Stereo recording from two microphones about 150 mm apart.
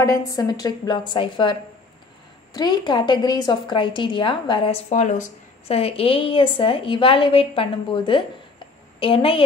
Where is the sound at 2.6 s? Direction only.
30° left (ahead or behind).